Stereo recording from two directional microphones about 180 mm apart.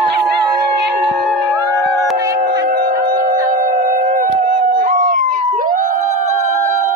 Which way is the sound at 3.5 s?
50° right (ahead or behind).